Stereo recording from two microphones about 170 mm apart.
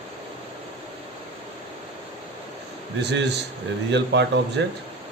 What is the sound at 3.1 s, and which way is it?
A man's voice, 80° right.